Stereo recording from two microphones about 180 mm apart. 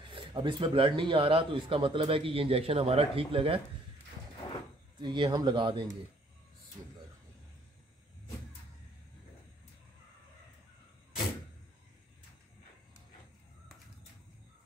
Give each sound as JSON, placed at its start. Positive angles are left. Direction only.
{"t": 0.1, "sound": "speech", "side_deg": -25}
{"t": 5.0, "sound": "speech", "side_deg": -25}